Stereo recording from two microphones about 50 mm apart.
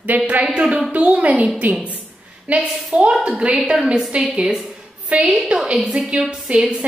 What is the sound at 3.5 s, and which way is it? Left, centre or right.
A woman's voice, centre.